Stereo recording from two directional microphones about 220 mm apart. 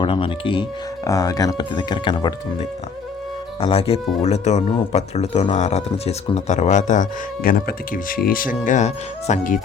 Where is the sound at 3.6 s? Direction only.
25° left (ahead or behind).